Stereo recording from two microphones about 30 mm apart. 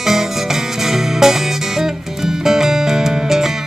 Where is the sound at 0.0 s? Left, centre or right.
Centre.